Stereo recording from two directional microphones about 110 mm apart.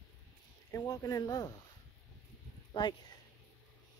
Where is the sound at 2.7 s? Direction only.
45° left (ahead or behind).